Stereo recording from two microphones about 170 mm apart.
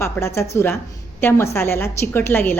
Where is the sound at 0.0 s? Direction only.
15° left (ahead or behind).